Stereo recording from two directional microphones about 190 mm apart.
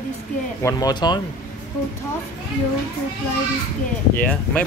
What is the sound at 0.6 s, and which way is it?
Speech, 20° left (ahead or behind).